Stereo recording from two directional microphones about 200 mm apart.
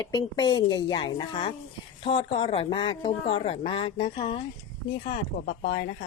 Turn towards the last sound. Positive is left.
turn(degrees=55)  # may be behind; listen again after turning